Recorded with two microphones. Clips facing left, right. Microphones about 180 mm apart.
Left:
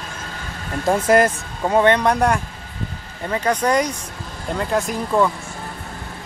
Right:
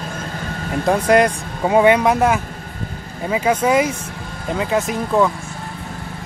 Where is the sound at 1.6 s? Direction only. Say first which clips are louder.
Right 2 dB; 10° right (ahead or behind).